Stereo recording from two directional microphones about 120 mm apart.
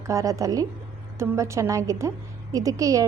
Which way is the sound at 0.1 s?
25° right (ahead or behind).